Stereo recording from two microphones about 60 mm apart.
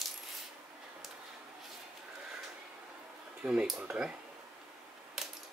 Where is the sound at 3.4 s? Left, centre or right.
Centre.